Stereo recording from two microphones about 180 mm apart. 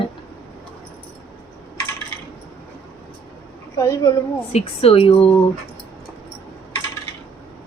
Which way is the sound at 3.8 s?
20° left (ahead or behind).